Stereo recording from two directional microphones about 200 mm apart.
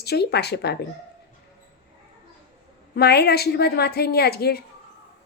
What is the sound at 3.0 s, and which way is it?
A woman's voice, 55° left (ahead or behind).